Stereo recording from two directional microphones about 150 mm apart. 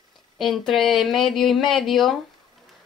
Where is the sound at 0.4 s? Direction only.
Centre (ahead or behind).